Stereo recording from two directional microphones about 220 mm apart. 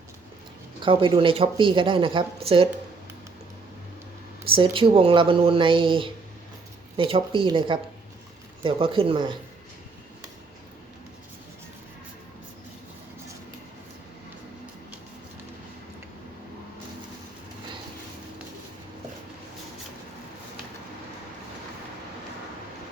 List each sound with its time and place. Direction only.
0.8 s speech: 25° right (ahead or behind)
4.4 s speech: 25° right (ahead or behind)